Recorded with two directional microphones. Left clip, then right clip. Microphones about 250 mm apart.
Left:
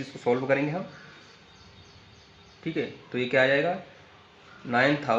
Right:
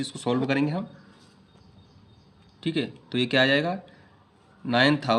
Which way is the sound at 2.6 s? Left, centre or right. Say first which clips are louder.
Right 2 dB; right.